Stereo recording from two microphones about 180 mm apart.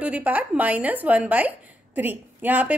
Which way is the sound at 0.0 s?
10° right (ahead or behind).